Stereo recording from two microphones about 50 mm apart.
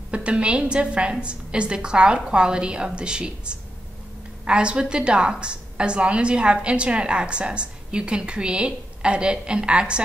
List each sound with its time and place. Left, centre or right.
0.1 s a woman's voice: right